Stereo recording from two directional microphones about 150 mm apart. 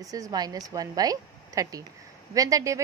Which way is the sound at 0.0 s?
25° right (ahead or behind).